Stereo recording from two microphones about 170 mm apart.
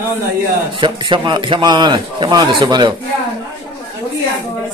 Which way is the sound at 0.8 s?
30° right (ahead or behind).